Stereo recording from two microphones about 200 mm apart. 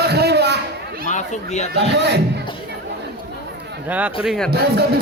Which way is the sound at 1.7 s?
60° right (ahead or behind).